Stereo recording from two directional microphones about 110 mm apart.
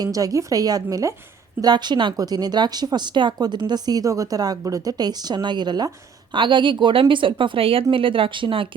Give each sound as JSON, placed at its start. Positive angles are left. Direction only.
{"t": 0.0, "sound": "a woman's voice", "side_deg": -35}